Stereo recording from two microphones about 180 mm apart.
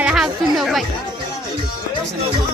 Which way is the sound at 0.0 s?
5° right (ahead or behind).